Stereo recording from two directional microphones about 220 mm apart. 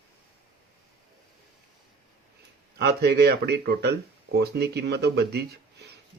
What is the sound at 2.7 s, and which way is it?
Speech, 45° right (ahead or behind).